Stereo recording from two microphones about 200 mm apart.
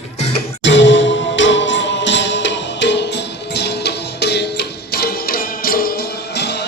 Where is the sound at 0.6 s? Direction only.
65° left (ahead or behind).